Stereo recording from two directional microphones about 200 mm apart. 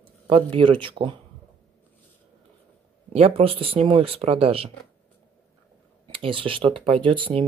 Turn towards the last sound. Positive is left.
turn(degrees=-25)  # may be behind; listen again after turning